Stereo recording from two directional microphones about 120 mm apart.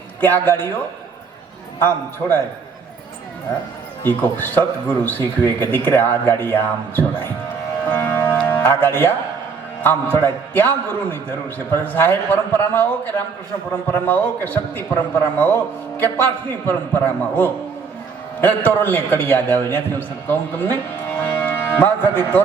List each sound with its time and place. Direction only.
0.2 s a man's voice: 15° left (ahead or behind)
2.2 s a man's voice: 20° left (ahead or behind)
4.0 s a man's voice: 15° left (ahead or behind)
7.9 s music: 15° left (ahead or behind)
9.8 s a man's voice: 15° left (ahead or behind)
16.6 s a man's voice: 15° left (ahead or behind)